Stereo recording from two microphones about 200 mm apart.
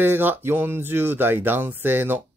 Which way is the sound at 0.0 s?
10° right (ahead or behind).